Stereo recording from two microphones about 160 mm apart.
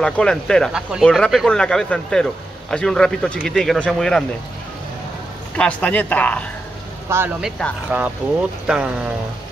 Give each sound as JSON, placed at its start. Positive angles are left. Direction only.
{"t": 0.0, "sound": "speech", "side_deg": 5}
{"t": 5.6, "sound": "speech", "side_deg": 10}
{"t": 7.1, "sound": "speech", "side_deg": -15}
{"t": 7.4, "sound": "speech", "side_deg": 5}